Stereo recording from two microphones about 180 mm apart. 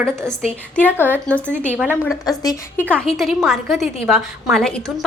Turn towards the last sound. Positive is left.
turn(degrees=5)  # may be behind; listen again after turning